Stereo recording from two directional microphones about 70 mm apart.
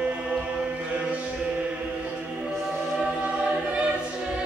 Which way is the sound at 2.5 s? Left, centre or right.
Centre.